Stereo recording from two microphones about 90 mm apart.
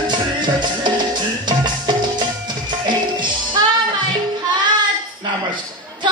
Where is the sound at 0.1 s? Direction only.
60° right (ahead or behind).